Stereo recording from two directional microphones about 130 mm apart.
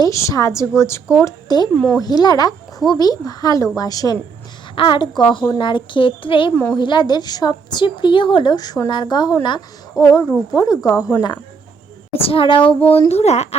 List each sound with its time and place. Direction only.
0.0 s a woman's voice: 25° left (ahead or behind)
1.2 s a woman's voice: 35° left (ahead or behind)
1.7 s speech: 5° left (ahead or behind)
2.0 s a woman's voice: 30° left (ahead or behind)
4.7 s a woman's voice: 40° left (ahead or behind)
12.1 s a woman's voice: 45° left (ahead or behind)
12.8 s speech: 15° left (ahead or behind)
13.1 s speech: 55° left (ahead or behind)